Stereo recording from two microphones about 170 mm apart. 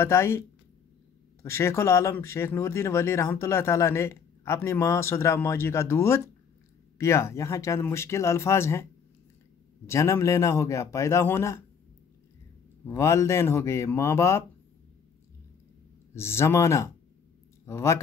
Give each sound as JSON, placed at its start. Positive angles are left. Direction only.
{"t": 0.0, "sound": "speech", "side_deg": 15}
{"t": 1.4, "sound": "speech", "side_deg": 15}
{"t": 9.8, "sound": "speech", "side_deg": 15}
{"t": 12.8, "sound": "speech", "side_deg": 15}
{"t": 16.2, "sound": "speech", "side_deg": 15}